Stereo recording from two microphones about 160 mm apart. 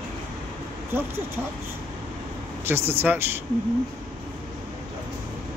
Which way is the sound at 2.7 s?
15° right (ahead or behind).